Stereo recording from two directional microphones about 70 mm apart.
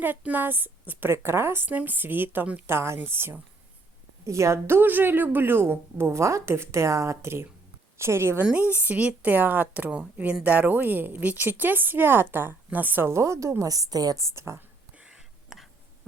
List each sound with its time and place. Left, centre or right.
0.2 s a woman's voice: right
4.3 s a woman's voice: right
8.5 s a woman's voice: right
14.3 s a woman's voice: right
14.9 s whispering: centre